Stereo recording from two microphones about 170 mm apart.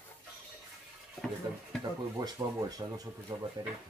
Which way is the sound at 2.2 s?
20° right (ahead or behind).